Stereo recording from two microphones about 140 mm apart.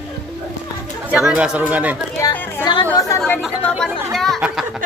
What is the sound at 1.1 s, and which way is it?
Speech, 5° right (ahead or behind).